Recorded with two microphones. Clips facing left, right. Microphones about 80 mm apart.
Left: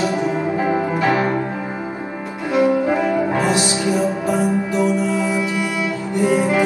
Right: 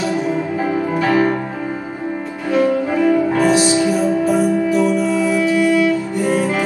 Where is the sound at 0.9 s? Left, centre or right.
Left.